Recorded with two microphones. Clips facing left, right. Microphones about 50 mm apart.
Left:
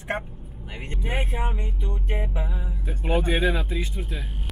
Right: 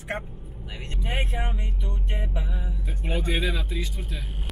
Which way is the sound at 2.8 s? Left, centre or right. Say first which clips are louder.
Left 6 dB; centre.